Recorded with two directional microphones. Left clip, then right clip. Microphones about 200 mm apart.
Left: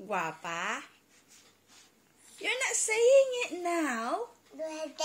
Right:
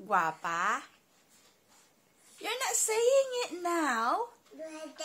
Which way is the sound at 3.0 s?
10° right (ahead or behind).